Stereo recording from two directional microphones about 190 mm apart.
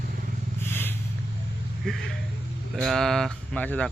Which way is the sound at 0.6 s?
10° left (ahead or behind).